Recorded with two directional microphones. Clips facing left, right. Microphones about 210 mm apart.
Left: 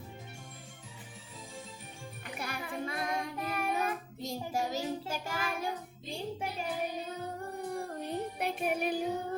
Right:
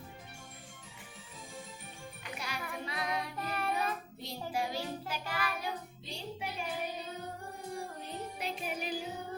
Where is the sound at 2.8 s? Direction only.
50° left (ahead or behind).